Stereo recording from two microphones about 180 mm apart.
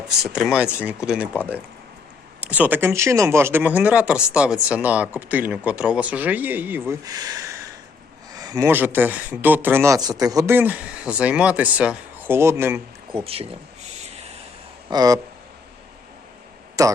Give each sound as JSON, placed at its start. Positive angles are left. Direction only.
{"t": 0.2, "sound": "speech", "side_deg": 0}
{"t": 7.0, "sound": "speech", "side_deg": -20}
{"t": 13.1, "sound": "speech", "side_deg": -30}
{"t": 14.8, "sound": "speech", "side_deg": -20}
{"t": 16.8, "sound": "speech", "side_deg": -20}